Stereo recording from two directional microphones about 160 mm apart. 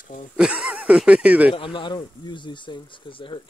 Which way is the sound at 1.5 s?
30° left (ahead or behind).